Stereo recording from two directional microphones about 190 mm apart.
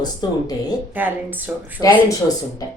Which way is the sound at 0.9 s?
10° right (ahead or behind).